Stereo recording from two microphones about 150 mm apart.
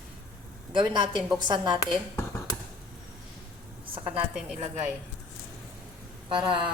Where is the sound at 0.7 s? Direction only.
30° right (ahead or behind).